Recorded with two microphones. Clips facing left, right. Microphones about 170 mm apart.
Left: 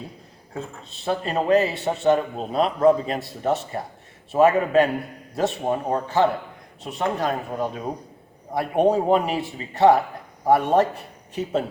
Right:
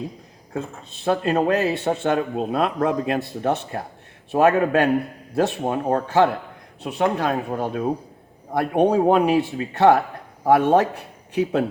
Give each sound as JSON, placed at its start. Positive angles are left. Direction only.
{"t": 1.0, "sound": "speech", "side_deg": -55}